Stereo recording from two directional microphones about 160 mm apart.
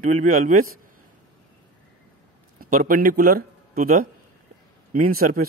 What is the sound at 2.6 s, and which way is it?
Speech, 60° right (ahead or behind).